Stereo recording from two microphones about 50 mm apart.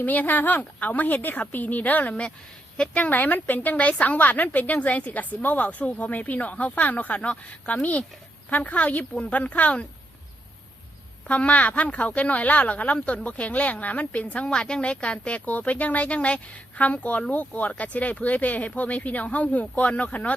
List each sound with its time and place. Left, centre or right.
0.0 s a woman's voice: left
11.3 s speech: left
14.4 s a woman's voice: centre